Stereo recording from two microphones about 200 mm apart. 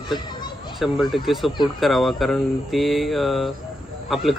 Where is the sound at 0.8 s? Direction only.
Centre (ahead or behind).